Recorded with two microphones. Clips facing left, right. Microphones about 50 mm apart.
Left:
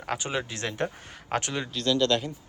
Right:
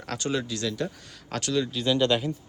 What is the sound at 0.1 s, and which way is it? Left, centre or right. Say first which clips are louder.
Speech: right 1 dB; left.